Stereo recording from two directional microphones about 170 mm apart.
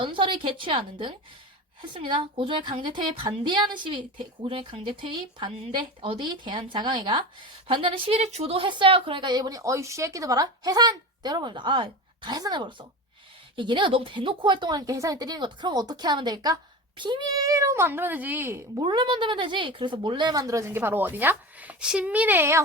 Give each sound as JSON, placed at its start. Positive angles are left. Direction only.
{"t": 0.0, "sound": "a woman's voice", "side_deg": -30}
{"t": 18.8, "sound": "speech", "side_deg": -25}